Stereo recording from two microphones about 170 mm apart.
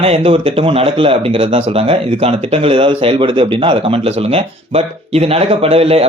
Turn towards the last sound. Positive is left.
turn(degrees=-35)  # may be behind; listen again after turning